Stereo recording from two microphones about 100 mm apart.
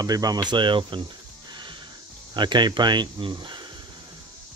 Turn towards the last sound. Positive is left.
turn(degrees=-50)  # may be behind; listen again after turning